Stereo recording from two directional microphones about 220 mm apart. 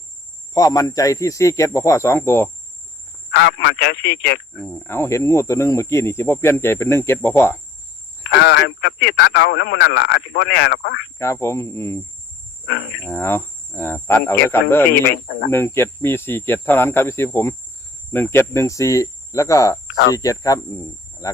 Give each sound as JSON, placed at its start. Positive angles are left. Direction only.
{"t": 0.5, "sound": "speech", "side_deg": 15}
{"t": 3.3, "sound": "speech", "side_deg": 50}
{"t": 4.6, "sound": "speech", "side_deg": 10}
{"t": 8.3, "sound": "speech", "side_deg": 55}
{"t": 11.2, "sound": "speech", "side_deg": 15}
{"t": 13.1, "sound": "speech", "side_deg": 10}
{"t": 15.1, "sound": "speech", "side_deg": 50}
{"t": 15.4, "sound": "speech", "side_deg": 10}